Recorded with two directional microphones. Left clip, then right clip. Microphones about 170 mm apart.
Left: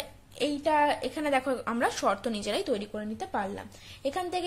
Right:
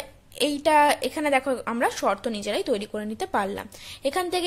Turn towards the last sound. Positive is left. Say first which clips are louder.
# right 5 dB
turn(degrees=-25)  # may be behind; listen again after turning